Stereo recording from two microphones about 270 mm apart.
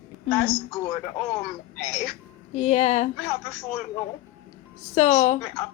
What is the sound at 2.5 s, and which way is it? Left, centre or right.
Speech, left.